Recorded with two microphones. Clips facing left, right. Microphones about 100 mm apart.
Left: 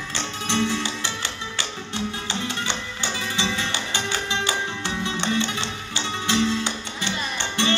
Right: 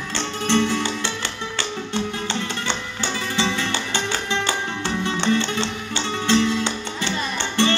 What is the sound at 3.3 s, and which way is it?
Music, 50° right (ahead or behind).